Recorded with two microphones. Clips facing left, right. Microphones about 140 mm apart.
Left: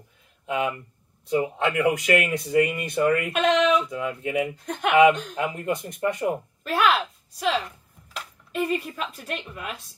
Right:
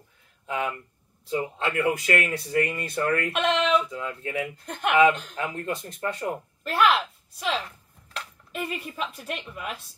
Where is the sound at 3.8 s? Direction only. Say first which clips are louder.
Left 4 dB; 15° left (ahead or behind).